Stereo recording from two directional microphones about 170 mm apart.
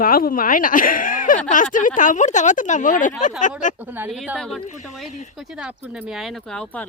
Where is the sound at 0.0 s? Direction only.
55° left (ahead or behind).